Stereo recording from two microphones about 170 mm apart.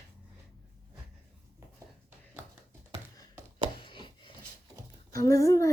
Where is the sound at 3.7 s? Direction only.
30° left (ahead or behind).